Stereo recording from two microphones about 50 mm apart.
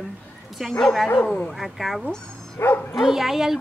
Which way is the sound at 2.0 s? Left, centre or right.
Centre.